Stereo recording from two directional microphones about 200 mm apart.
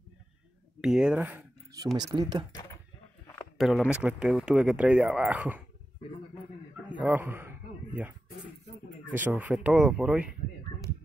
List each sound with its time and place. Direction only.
0.7 s speech: 5° right (ahead or behind); by 2.4 s 20° right (ahead or behind)
3.5 s speech: centre (ahead or behind)
7.0 s a sound: 10° right (ahead or behind)
9.1 s speech: 10° right (ahead or behind)